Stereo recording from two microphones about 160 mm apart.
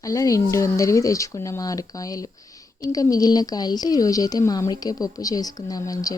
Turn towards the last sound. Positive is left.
turn(degrees=25)  # may be behind; listen again after turning